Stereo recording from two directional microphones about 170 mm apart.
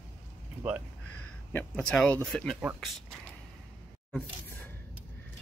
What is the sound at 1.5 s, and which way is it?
Speech, 5° left (ahead or behind).